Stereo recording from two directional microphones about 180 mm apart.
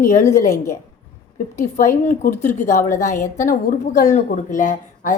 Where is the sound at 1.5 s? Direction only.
45° left (ahead or behind).